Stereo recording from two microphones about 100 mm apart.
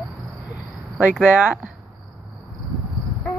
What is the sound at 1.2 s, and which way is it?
Speech, 15° right (ahead or behind).